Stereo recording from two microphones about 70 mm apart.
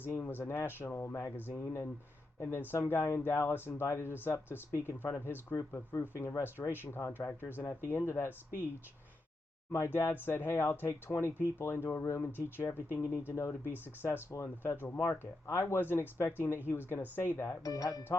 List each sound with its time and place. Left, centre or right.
0.0 s speech: left
9.7 s speech: left
17.6 s speech: left